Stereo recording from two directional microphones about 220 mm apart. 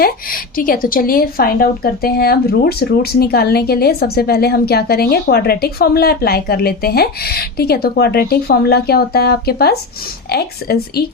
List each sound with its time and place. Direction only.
0.0 s a woman's voice: 40° left (ahead or behind)